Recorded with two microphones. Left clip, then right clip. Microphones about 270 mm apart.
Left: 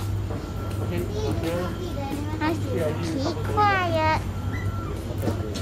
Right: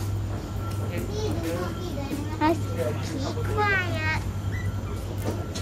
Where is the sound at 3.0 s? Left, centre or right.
Centre.